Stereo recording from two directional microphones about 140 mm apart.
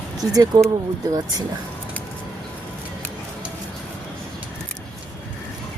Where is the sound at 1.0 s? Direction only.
25° right (ahead or behind).